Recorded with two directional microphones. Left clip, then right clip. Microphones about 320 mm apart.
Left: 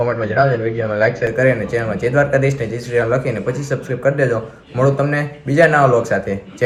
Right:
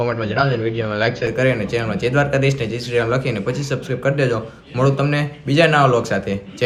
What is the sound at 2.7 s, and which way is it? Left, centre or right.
Speech, centre.